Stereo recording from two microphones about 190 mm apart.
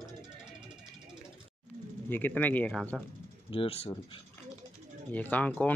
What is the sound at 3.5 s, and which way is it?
Speech, 30° left (ahead or behind).